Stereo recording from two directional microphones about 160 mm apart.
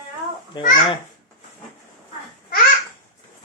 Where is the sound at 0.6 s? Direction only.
25° left (ahead or behind).